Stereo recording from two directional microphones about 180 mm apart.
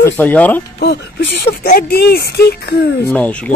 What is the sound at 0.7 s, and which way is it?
Speech, 70° left (ahead or behind).